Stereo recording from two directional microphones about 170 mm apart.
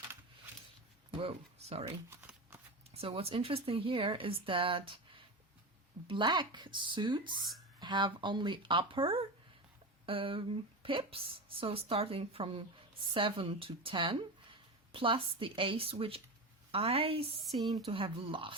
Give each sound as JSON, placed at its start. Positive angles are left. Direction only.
{"t": 1.1, "sound": "speech", "side_deg": -35}
{"t": 2.0, "sound": "shuffling cards", "side_deg": -10}
{"t": 2.9, "sound": "speech", "side_deg": -35}